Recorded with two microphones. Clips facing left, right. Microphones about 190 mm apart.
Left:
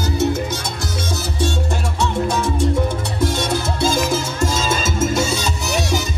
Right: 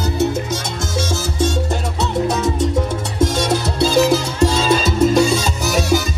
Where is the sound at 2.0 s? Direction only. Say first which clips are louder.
Right 1 dB; 40° right (ahead or behind).